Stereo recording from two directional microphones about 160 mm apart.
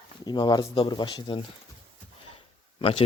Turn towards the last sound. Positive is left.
turn(degrees=35)  # may be behind; listen again after turning